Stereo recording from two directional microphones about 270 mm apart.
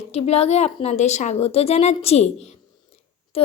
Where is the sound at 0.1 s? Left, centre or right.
Left.